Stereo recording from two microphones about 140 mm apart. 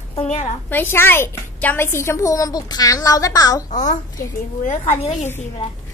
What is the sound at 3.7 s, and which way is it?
A woman's voice, 60° left (ahead or behind).